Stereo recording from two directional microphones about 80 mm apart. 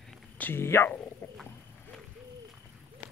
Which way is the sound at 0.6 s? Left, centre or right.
Left.